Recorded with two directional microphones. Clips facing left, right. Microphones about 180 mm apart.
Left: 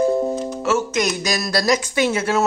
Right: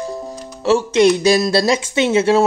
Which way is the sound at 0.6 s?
30° right (ahead or behind).